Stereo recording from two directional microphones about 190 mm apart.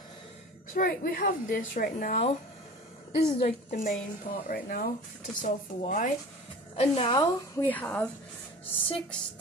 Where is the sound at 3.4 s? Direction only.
40° left (ahead or behind).